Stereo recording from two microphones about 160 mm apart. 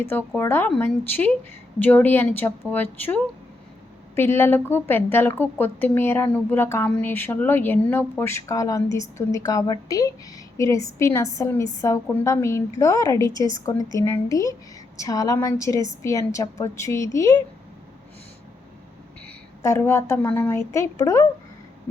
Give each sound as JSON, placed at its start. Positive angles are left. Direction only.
{"t": 0.1, "sound": "a woman's voice", "side_deg": 15}
{"t": 19.6, "sound": "a woman's voice", "side_deg": 15}